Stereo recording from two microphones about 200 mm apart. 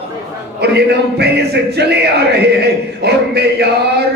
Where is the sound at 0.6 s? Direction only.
55° right (ahead or behind).